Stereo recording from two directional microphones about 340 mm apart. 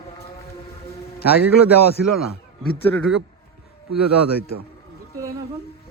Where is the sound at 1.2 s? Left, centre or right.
Left.